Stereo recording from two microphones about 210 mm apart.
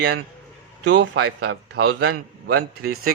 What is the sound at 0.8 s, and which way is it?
A man's voice, 60° right (ahead or behind).